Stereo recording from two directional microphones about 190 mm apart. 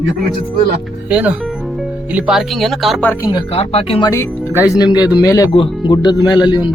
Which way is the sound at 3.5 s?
30° left (ahead or behind).